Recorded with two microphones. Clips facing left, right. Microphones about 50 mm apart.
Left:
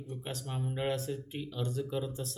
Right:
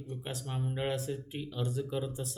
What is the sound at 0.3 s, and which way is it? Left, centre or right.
Speech, centre.